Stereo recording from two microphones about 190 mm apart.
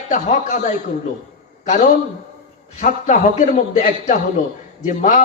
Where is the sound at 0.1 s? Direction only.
40° left (ahead or behind).